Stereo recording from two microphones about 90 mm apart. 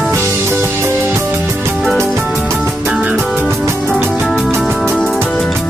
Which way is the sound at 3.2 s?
15° right (ahead or behind).